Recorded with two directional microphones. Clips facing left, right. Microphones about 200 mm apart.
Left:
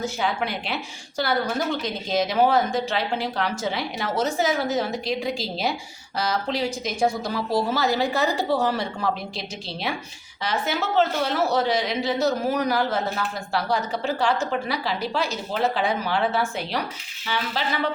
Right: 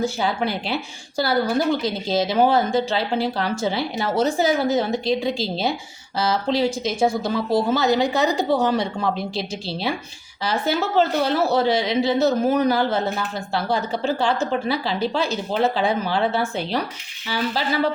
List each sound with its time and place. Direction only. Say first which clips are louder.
0.0 s speech: right 3 dB; 35° right (ahead or behind)
9.3 s speech: right 6 dB; 30° right (ahead or behind)